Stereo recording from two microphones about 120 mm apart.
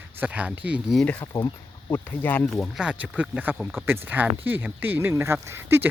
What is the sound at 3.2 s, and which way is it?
Speech, 15° right (ahead or behind).